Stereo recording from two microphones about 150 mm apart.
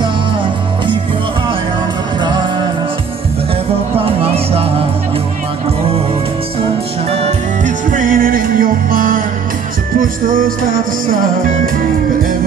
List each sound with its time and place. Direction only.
4.0 s music: 40° right (ahead or behind)
7.1 s music: 50° right (ahead or behind); by 11.7 s 70° right (ahead or behind)